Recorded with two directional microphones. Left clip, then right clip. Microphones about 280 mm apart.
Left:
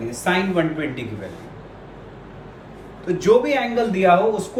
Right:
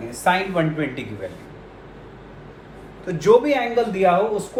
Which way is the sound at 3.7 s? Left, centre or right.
Centre.